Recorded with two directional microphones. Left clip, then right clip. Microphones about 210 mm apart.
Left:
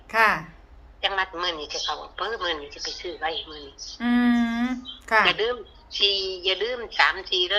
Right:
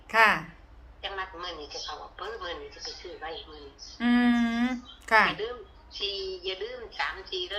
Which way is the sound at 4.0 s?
Centre (ahead or behind).